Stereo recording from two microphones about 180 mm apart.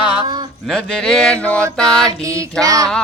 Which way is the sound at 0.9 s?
5° left (ahead or behind).